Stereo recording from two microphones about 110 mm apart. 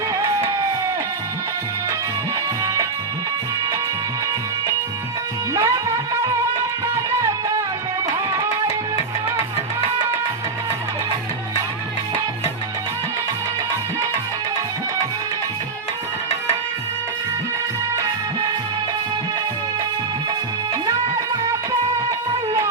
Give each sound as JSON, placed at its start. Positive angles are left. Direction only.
{"t": 5.5, "sound": "music", "side_deg": -30}